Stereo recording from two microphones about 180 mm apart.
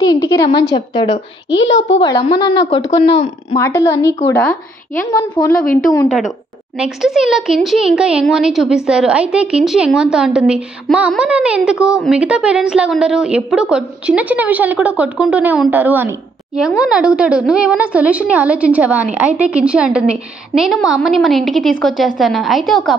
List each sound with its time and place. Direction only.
0.0 s a woman's voice: 20° left (ahead or behind)
1.7 s a child's voice: 90° left
2.0 s a woman's voice: 30° left (ahead or behind); by 4.6 s 10° left (ahead or behind)
5.4 s a woman's voice: 25° left (ahead or behind)
6.0 s a child's voice: centre (ahead or behind)